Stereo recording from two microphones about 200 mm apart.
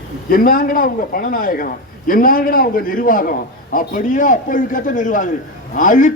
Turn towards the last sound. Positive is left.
turn(degrees=40)  # may be behind; listen again after turning